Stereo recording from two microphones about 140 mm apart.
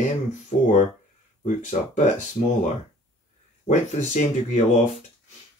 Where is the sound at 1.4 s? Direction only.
55° left (ahead or behind).